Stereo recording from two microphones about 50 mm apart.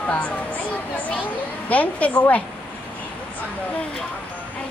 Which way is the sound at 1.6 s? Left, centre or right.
Left.